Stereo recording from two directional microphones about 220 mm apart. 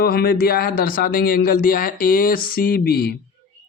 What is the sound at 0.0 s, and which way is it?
Speech, 45° left (ahead or behind).